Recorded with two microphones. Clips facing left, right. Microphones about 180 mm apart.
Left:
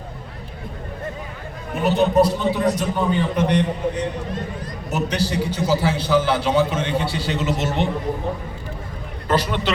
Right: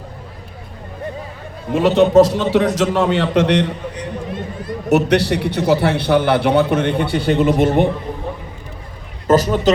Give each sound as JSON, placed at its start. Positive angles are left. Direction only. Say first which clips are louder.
{"t": 1.7, "sound": "a man's voice", "louder": "right 6 dB", "side_deg": -90}
{"t": 4.9, "sound": "a man's voice", "louder": "right 9 dB", "side_deg": -70}
{"t": 9.2, "sound": "a man's voice", "louder": "right 8 dB", "side_deg": -45}